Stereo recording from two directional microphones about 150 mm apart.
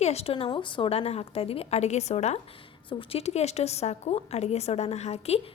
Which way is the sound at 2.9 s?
35° left (ahead or behind).